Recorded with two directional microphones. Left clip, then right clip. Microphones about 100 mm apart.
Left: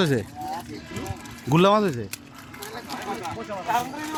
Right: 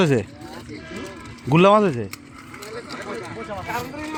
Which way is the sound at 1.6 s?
30° right (ahead or behind).